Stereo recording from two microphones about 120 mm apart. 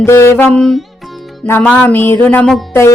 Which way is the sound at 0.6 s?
Centre (ahead or behind).